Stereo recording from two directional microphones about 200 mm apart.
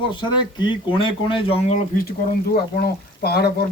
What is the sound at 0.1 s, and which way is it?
Speech, 25° left (ahead or behind).